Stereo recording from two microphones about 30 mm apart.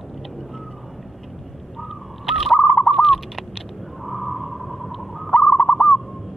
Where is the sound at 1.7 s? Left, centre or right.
Centre.